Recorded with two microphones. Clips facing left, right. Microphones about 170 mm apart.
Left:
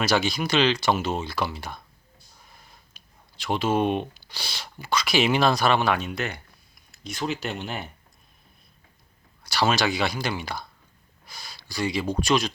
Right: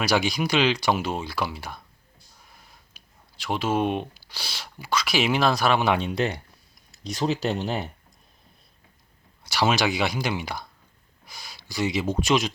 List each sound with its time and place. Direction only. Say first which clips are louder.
0.0 s speech: even; 15° right (ahead or behind)
3.0 s a sound: right 1 dB; 10° right (ahead or behind)
3.4 s speech: left 1 dB; 5° right (ahead or behind)
5.8 s speech: right 2 dB; 25° right (ahead or behind)
9.4 s speech: even; 15° right (ahead or behind)
11.3 s a sound: even; 15° right (ahead or behind)
12.2 s speech: even; 20° right (ahead or behind)